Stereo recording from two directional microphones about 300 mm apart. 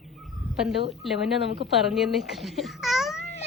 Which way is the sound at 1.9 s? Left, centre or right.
Centre.